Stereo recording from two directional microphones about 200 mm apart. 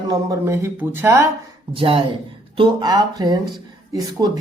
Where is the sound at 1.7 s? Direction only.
25° right (ahead or behind).